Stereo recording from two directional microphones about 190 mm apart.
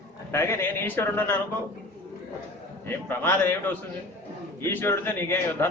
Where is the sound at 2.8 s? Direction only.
10° left (ahead or behind).